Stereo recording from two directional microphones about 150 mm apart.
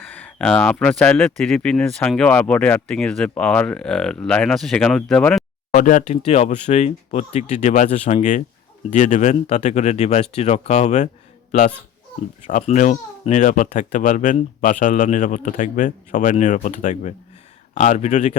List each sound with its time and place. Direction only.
0.1 s speech: 10° left (ahead or behind)
5.7 s speech: 60° left (ahead or behind)
12.6 s speech: 55° left (ahead or behind)